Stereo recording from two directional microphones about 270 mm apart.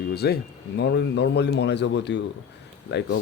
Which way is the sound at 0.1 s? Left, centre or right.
Left.